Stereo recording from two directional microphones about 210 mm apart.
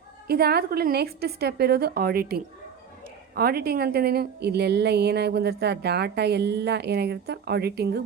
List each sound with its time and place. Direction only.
0.3 s a woman's voice: 50° right (ahead or behind)